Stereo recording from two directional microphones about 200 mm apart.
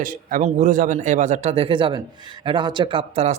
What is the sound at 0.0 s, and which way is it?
Speech, 40° right (ahead or behind).